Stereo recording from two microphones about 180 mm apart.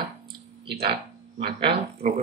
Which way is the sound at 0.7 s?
65° right (ahead or behind).